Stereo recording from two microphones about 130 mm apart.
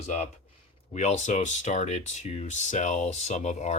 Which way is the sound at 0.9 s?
65° left (ahead or behind).